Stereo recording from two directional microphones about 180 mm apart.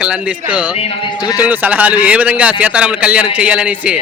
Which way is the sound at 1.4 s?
10° right (ahead or behind).